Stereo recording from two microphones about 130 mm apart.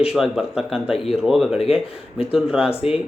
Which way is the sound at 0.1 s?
5° right (ahead or behind).